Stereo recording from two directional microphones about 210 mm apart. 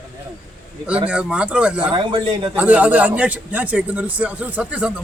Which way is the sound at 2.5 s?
5° right (ahead or behind).